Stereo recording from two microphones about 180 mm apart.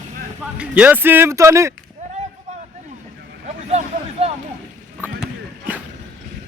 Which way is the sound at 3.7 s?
40° right (ahead or behind).